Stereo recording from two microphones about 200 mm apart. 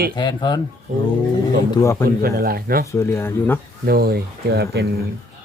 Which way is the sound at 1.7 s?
15° left (ahead or behind).